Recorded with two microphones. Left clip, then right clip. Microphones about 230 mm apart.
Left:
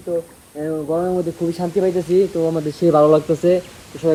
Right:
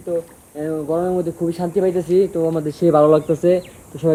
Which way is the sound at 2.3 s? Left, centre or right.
Centre.